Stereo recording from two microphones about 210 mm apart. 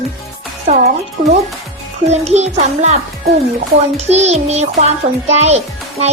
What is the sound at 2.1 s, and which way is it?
Child singing, 30° right (ahead or behind).